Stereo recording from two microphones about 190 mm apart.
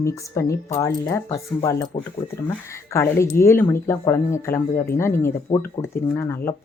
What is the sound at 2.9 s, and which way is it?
Speech, 15° left (ahead or behind).